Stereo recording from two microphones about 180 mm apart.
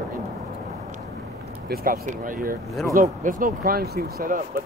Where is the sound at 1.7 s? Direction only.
55° right (ahead or behind).